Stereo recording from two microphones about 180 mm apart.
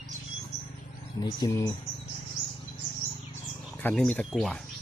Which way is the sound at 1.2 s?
20° left (ahead or behind).